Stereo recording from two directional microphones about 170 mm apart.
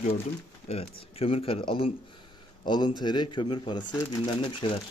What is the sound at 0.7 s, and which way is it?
Speech, 35° left (ahead or behind).